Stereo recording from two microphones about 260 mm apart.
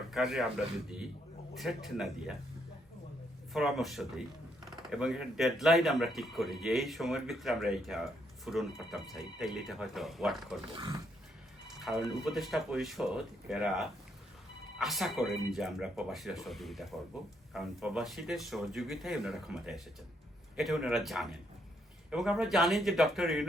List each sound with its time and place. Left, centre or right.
0.1 s speech: centre
3.5 s speech: centre
10.7 s speech: centre
11.9 s speech: centre